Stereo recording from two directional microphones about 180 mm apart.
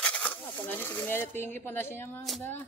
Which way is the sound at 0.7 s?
10° left (ahead or behind).